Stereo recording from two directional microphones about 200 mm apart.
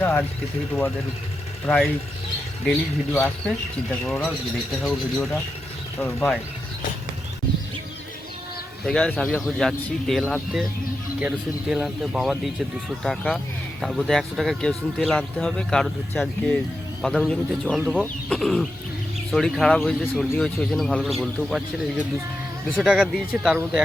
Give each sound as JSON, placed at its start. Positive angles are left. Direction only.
{"t": 0.0, "sound": "a sound", "side_deg": 10}
{"t": 1.6, "sound": "speech", "side_deg": 0}
{"t": 4.8, "sound": "speech", "side_deg": 0}
{"t": 8.8, "sound": "speech", "side_deg": 5}